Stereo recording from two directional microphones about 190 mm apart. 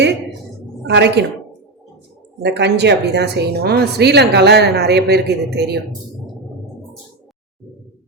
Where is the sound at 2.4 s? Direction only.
65° right (ahead or behind).